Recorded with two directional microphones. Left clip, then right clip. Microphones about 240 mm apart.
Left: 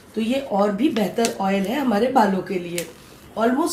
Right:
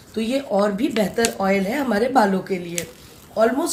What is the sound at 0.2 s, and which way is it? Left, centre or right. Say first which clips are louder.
Speech: right 1 dB; right.